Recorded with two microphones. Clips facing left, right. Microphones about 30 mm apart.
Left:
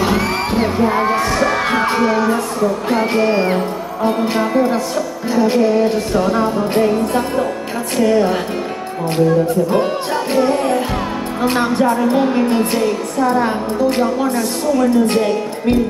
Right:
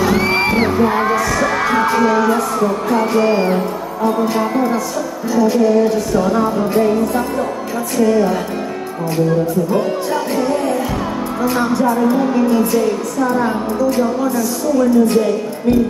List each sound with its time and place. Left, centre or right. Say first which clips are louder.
0.2 s music: right 3 dB; right
0.7 s music: right 1 dB; left
2.9 s speech: right 2 dB; left
5.3 s music: right 1 dB; left
11.4 s music: left 1 dB; left